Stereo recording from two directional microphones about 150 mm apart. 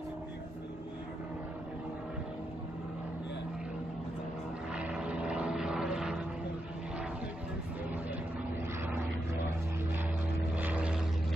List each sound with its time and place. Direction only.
4.7 s vehicle: 10° right (ahead or behind)
10.5 s vehicle: 10° right (ahead or behind)